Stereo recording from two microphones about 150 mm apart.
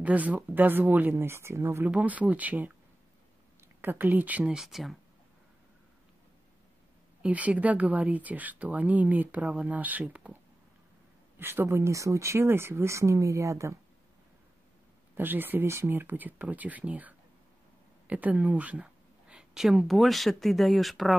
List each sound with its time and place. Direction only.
0.0 s speech: 10° right (ahead or behind)
7.2 s speech: 10° right (ahead or behind)
15.1 s speech: 15° right (ahead or behind)